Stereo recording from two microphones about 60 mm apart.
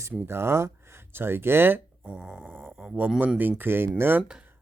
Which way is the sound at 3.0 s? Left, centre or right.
Right.